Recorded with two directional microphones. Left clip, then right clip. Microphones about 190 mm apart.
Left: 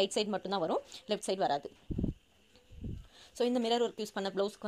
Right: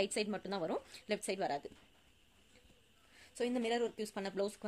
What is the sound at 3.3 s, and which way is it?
A woman's voice, 30° left (ahead or behind).